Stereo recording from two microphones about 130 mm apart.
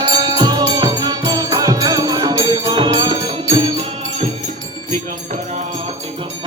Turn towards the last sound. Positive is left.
turn(degrees=-65)  # may be behind; listen again after turning